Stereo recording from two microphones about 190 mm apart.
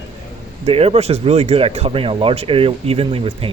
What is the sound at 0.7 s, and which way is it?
Speech, 30° right (ahead or behind).